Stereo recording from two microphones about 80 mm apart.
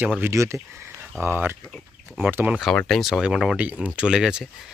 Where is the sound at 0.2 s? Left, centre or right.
Right.